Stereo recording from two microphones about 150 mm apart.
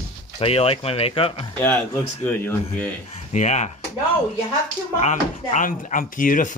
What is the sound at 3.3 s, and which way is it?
Speech, 50° left (ahead or behind).